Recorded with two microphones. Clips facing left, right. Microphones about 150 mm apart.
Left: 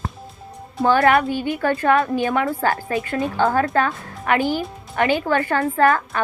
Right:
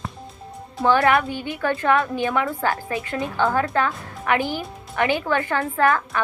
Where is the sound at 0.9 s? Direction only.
45° left (ahead or behind).